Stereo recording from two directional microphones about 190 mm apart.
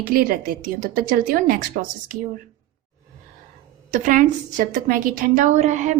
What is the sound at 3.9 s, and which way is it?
A woman's voice, 45° right (ahead or behind).